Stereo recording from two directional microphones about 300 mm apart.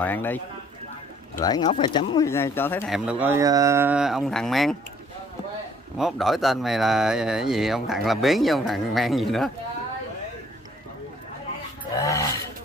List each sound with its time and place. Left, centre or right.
0.0 s speech: centre
1.4 s speech: centre
3.1 s speech: centre
5.9 s speech: centre
11.9 s roaring cats: centre